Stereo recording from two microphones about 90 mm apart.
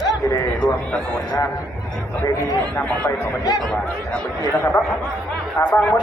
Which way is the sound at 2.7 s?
15° left (ahead or behind).